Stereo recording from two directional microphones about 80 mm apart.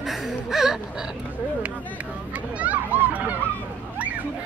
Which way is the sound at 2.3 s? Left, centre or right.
Centre.